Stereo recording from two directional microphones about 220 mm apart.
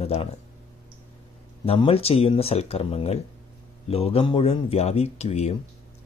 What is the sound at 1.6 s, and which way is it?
Speech, 25° left (ahead or behind).